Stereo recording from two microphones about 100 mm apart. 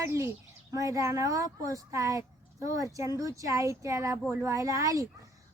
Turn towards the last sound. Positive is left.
turn(degrees=-35)  # may be behind; listen again after turning